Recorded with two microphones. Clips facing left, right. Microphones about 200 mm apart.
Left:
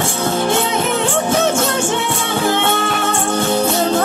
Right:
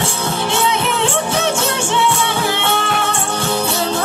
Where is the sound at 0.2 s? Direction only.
50° left (ahead or behind).